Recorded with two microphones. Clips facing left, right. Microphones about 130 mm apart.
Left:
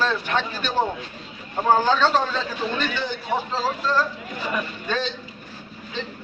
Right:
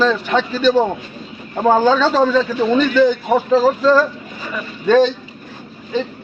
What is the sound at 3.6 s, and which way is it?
Speech, 90° right.